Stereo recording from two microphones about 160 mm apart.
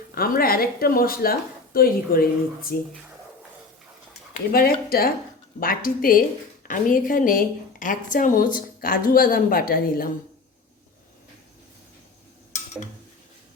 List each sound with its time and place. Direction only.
0.1 s a woman's voice: 70° left (ahead or behind)
4.5 s a woman's voice: 70° left (ahead or behind)